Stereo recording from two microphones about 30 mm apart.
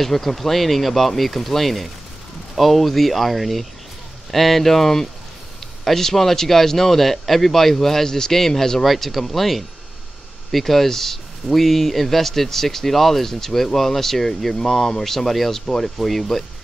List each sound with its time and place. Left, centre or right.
0.0 s speech: centre
8.8 s speech: centre
11.4 s speech: centre